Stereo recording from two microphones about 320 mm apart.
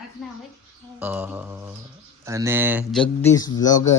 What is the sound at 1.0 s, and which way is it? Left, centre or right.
Mantra, centre.